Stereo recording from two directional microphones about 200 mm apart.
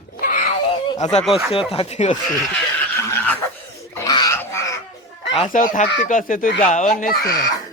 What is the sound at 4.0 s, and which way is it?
Bird, 15° left (ahead or behind).